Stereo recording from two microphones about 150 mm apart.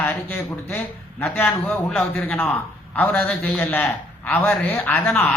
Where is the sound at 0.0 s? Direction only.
15° left (ahead or behind).